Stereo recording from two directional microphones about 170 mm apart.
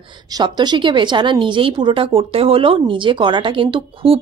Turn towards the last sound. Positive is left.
turn(degrees=-30)  # may be behind; listen again after turning